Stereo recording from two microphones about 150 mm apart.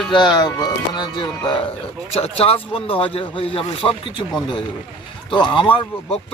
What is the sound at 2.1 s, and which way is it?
Speech, 40° left (ahead or behind).